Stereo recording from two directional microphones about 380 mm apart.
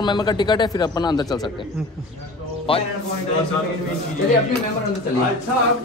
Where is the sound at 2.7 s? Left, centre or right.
Centre.